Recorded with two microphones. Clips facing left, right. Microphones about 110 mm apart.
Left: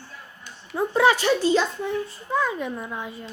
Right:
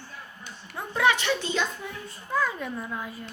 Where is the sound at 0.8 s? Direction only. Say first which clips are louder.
Left 5 dB; 30° left (ahead or behind).